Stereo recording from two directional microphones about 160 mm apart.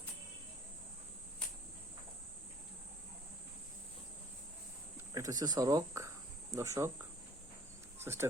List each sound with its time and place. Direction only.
5.1 s speech: 20° right (ahead or behind)
7.9 s speech: 15° right (ahead or behind)